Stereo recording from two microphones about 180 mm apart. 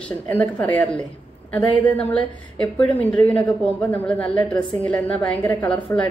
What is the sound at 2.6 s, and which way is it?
Speech, 10° left (ahead or behind).